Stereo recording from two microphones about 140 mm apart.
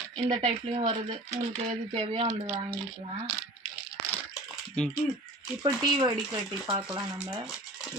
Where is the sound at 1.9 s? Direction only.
45° right (ahead or behind).